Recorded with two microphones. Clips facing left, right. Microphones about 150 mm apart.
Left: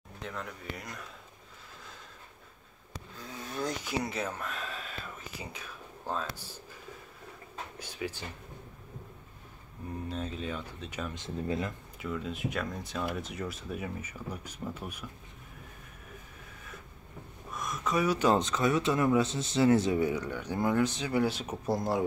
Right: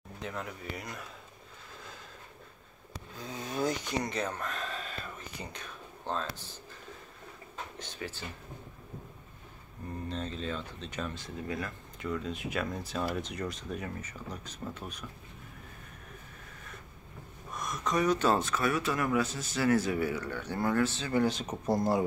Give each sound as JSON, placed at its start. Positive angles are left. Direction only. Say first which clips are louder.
{"t": 0.2, "sound": "speech", "louder": "right 1 dB", "side_deg": -5}
{"t": 3.2, "sound": "a sound", "louder": "right 3 dB", "side_deg": -20}
{"t": 3.6, "sound": "a sound", "louder": "right 1 dB", "side_deg": 5}
{"t": 5.4, "sound": "speech", "louder": "even", "side_deg": 5}
{"t": 7.8, "sound": "speech", "louder": "left 5 dB", "side_deg": 10}
{"t": 10.0, "sound": "speech", "louder": "even", "side_deg": 10}
{"t": 11.1, "sound": "speech", "louder": "left 4 dB", "side_deg": 25}
{"t": 12.0, "sound": "speech", "louder": "even", "side_deg": 5}
{"t": 17.5, "sound": "speech", "louder": "even", "side_deg": 0}